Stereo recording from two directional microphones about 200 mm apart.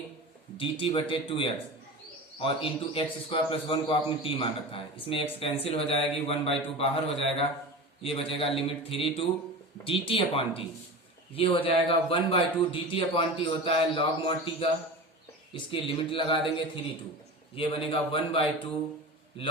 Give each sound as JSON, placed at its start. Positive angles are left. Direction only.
{"t": 0.5, "sound": "a man's voice", "side_deg": 25}
{"t": 17.5, "sound": "a man's voice", "side_deg": 25}